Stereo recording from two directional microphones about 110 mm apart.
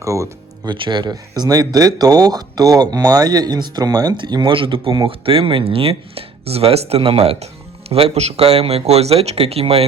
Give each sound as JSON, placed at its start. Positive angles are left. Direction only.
{"t": 0.0, "sound": "music", "side_deg": -30}
{"t": 0.7, "sound": "speech", "side_deg": -45}
{"t": 4.5, "sound": "speech", "side_deg": -55}